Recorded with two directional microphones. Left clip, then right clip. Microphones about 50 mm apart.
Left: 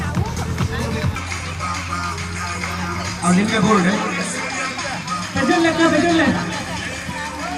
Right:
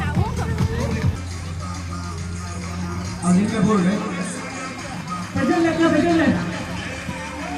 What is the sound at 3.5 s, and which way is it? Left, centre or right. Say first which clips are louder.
Speech: left 6 dB; right.